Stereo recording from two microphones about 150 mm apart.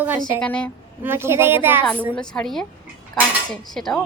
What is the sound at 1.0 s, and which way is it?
Speech, 15° right (ahead or behind).